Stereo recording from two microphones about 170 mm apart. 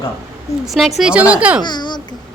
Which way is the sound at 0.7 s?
Centre (ahead or behind).